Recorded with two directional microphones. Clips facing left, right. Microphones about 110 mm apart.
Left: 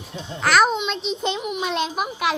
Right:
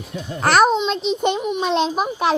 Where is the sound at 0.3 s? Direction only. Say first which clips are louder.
Right 3 dB; 45° right (ahead or behind).